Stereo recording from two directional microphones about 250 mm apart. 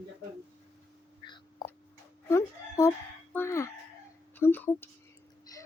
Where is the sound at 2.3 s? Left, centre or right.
Centre.